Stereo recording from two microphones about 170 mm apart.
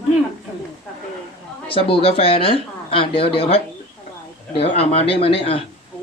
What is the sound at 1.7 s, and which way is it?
Speech, 35° left (ahead or behind).